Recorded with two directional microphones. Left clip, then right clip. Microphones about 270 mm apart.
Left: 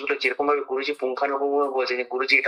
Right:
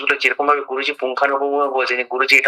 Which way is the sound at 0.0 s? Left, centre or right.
Centre.